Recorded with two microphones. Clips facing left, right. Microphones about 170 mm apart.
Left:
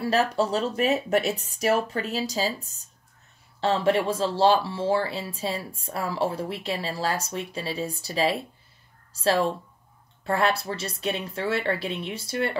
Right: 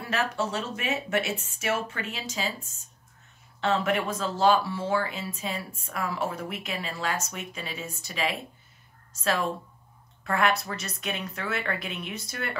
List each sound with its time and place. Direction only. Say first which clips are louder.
0.0 s speech: left 6 dB; 35° left (ahead or behind)